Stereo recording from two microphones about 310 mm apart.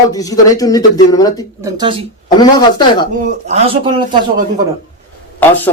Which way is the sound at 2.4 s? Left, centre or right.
Centre.